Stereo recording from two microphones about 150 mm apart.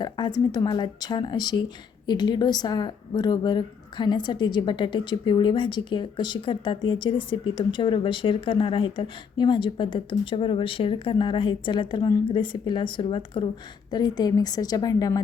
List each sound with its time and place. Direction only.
0.0 s a woman's voice: 30° left (ahead or behind)